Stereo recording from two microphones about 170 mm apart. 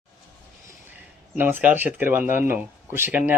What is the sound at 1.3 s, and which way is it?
Speech, 10° right (ahead or behind).